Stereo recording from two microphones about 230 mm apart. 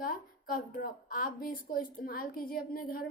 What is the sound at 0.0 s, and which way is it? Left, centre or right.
A woman's voice, left.